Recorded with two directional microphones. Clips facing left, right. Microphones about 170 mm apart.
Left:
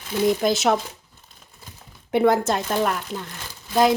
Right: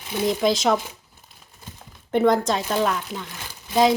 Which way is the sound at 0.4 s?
5° left (ahead or behind).